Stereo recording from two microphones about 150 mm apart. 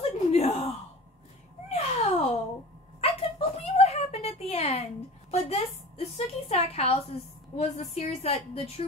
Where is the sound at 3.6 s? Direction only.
45° left (ahead or behind).